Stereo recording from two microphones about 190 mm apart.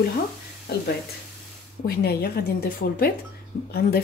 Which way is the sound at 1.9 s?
55° left (ahead or behind).